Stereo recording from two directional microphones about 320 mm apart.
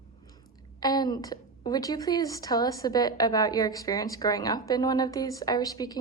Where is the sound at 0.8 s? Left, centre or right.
Centre.